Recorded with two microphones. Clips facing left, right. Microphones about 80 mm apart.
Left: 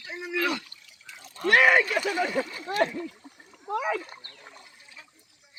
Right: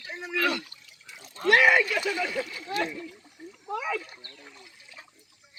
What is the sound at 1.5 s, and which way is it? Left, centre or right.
Speech, left.